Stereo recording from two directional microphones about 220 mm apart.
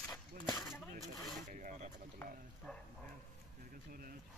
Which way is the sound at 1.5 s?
35° right (ahead or behind).